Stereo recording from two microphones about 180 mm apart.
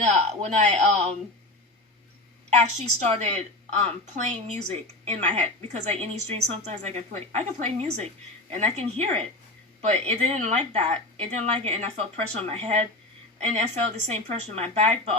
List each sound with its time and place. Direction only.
0.1 s a woman's voice: 40° right (ahead or behind)
2.6 s a woman's voice: 40° right (ahead or behind)